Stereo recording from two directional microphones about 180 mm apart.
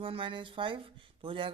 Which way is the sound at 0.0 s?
30° right (ahead or behind).